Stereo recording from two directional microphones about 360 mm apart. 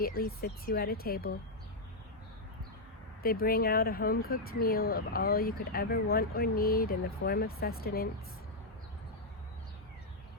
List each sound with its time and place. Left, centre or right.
0.0 s speech: left
3.2 s speech: left